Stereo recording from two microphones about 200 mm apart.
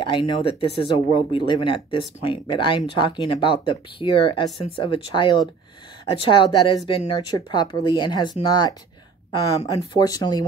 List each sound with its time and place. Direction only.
0.0 s speech: 25° left (ahead or behind)
9.9 s speech: 20° left (ahead or behind)